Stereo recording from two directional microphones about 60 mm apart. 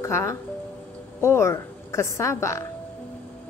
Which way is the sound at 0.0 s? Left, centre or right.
Left.